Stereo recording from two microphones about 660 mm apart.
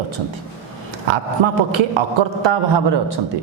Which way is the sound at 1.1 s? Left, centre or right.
Right.